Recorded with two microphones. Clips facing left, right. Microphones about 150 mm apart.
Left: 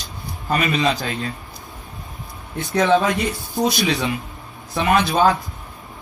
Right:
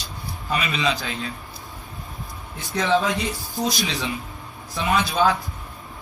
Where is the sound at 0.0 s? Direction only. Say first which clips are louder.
Left 1 dB; 45° left (ahead or behind).